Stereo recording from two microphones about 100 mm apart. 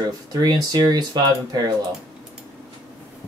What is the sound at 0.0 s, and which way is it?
Speech, 40° right (ahead or behind).